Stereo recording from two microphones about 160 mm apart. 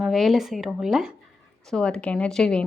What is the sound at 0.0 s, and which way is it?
Speech, centre (ahead or behind).